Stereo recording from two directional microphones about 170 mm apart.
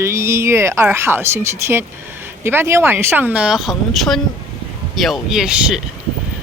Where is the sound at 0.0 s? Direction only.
15° right (ahead or behind).